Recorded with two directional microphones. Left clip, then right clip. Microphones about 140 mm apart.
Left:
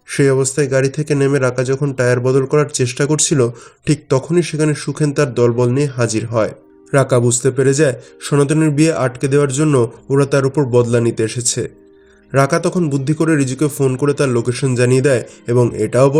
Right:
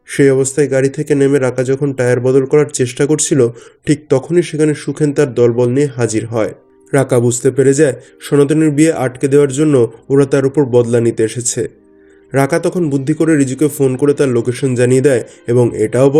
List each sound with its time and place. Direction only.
0.1 s speech: 15° right (ahead or behind)